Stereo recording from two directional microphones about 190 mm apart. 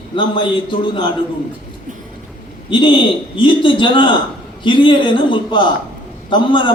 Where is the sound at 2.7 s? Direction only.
25° left (ahead or behind).